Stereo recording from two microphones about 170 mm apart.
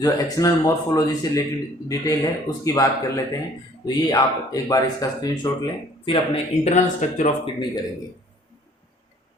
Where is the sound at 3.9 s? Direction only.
20° left (ahead or behind).